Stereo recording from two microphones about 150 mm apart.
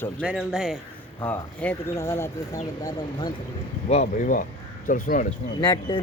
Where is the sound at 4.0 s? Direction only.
60° left (ahead or behind).